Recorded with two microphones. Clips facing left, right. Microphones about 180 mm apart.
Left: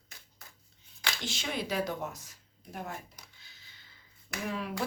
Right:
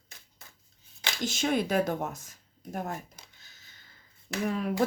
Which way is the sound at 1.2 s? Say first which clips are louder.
Right 10 dB; 45° right (ahead or behind).